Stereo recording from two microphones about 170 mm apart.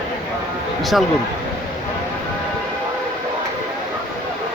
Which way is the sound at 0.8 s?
Centre (ahead or behind).